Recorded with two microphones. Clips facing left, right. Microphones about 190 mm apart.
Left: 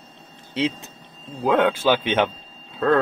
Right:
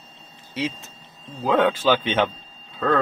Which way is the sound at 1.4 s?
10° left (ahead or behind).